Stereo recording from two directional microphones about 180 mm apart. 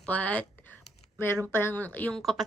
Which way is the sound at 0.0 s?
5° left (ahead or behind).